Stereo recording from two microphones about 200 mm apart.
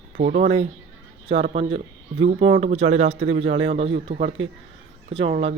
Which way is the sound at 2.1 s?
70° right (ahead or behind).